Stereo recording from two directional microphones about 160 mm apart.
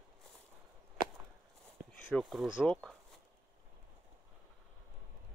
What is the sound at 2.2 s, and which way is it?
Speech, centre (ahead or behind).